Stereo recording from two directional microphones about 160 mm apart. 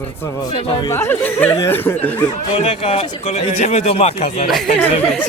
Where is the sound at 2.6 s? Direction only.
40° left (ahead or behind).